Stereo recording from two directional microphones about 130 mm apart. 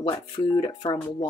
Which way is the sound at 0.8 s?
50° left (ahead or behind).